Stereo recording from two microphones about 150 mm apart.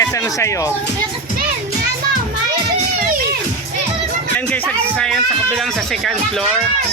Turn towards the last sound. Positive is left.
turn(degrees=0)  # may be behind; listen again after turning